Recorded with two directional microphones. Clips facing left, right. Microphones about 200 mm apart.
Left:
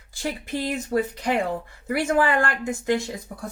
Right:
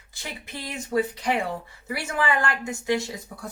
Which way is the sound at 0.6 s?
45° left (ahead or behind).